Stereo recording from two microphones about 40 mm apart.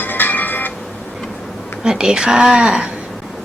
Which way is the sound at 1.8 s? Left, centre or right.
Centre.